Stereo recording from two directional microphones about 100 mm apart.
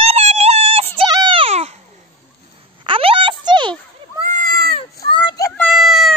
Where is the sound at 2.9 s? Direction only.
65° right (ahead or behind).